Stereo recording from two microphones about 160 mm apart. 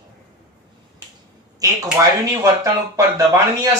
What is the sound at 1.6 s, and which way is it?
Speech, 20° right (ahead or behind).